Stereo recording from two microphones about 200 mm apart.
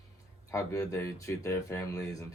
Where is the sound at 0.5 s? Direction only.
15° left (ahead or behind).